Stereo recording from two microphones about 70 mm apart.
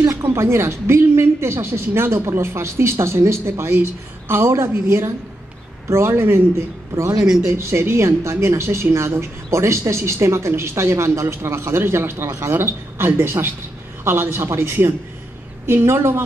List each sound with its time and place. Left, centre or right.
0.2 s a woman's voice: right
7.2 s speech: centre
7.4 s a woman's voice: right